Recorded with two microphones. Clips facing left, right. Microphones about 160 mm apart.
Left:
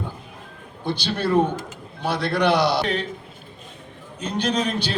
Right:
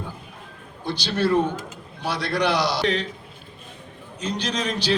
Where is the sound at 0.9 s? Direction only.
55° left (ahead or behind).